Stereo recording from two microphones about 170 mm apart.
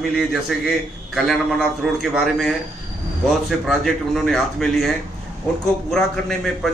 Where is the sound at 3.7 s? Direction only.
Centre (ahead or behind).